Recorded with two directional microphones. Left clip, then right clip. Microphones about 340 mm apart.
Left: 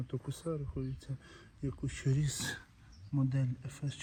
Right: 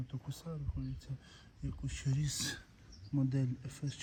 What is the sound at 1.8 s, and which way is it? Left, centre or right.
Speech, centre.